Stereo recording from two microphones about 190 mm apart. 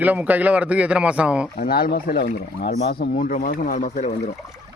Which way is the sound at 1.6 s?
50° left (ahead or behind).